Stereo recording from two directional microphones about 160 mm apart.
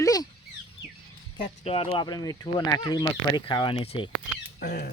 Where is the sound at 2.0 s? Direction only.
25° left (ahead or behind).